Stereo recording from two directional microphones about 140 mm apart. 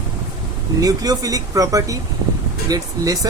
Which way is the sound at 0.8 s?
25° right (ahead or behind).